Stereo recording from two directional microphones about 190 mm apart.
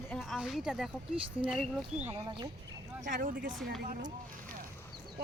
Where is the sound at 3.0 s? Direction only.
45° right (ahead or behind).